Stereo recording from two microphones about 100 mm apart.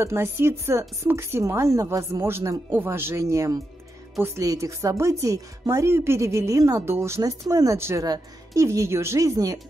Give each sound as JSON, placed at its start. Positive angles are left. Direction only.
{"t": 0.0, "sound": "a woman's voice", "side_deg": -25}